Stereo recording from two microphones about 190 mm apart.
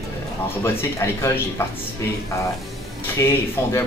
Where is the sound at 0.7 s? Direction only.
15° left (ahead or behind).